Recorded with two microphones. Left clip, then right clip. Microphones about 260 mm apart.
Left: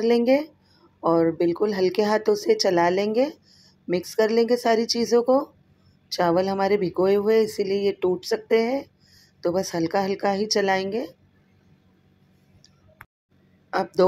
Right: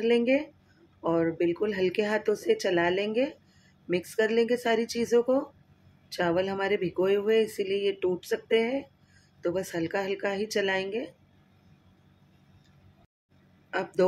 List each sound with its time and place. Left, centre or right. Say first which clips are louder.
0.0 s speech: left 5 dB; centre